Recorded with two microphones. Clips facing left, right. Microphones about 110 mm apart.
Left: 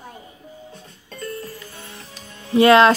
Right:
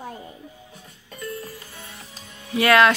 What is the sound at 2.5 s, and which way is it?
Speech, 25° left (ahead or behind).